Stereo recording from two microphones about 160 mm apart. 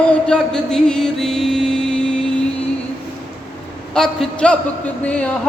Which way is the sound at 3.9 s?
5° left (ahead or behind).